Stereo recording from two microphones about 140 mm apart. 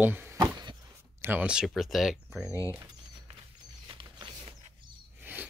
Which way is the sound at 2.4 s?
20° left (ahead or behind).